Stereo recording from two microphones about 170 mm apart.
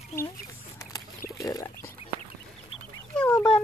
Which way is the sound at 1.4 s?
20° left (ahead or behind).